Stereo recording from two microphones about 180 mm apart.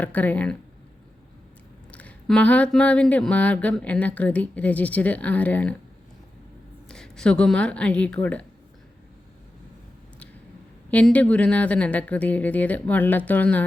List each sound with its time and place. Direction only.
0.0 s speech: 10° left (ahead or behind)
1.9 s speech: 5° left (ahead or behind)
6.8 s speech: 5° left (ahead or behind)
10.9 s speech: 5° left (ahead or behind)